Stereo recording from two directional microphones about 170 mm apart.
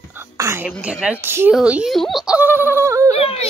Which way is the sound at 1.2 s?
15° right (ahead or behind).